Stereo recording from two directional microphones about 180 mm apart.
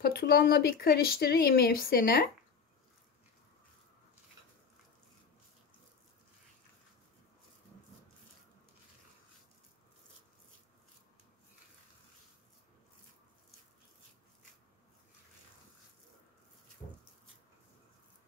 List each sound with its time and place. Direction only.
0.0 s speech: 60° left (ahead or behind)